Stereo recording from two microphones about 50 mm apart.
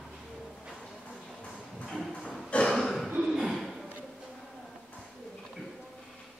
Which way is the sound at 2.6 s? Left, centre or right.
Centre.